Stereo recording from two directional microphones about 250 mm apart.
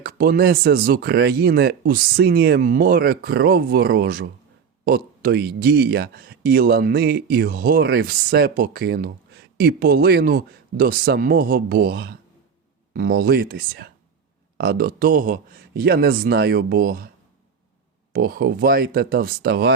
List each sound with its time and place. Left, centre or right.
0.0 s speech: right
18.1 s speech: right